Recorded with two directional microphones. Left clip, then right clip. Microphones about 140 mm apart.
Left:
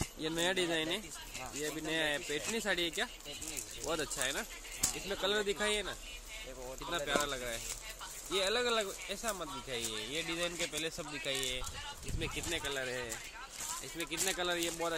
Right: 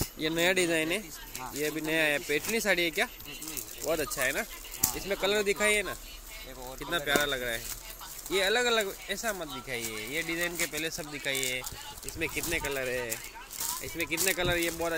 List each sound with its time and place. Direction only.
0.2 s speech: 20° right (ahead or behind)
3.8 s speech: 5° right (ahead or behind)
9.7 s speech: 5° left (ahead or behind)
12.2 s speech: 15° right (ahead or behind)
14.2 s speech: 15° right (ahead or behind)